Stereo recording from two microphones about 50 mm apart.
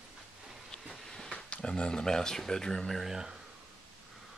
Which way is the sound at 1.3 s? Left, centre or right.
Centre.